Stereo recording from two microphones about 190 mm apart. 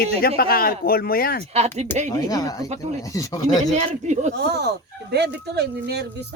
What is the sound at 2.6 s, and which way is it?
Speech, 35° right (ahead or behind).